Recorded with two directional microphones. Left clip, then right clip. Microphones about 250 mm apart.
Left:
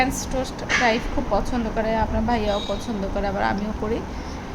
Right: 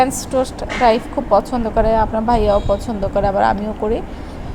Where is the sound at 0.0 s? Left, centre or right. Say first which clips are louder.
Right 7 dB; right.